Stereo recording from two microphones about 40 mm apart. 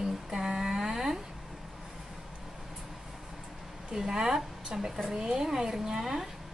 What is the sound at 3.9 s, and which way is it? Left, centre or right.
Speech, centre.